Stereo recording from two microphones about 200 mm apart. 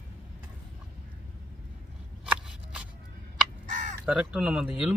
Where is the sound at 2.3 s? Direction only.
5° right (ahead or behind).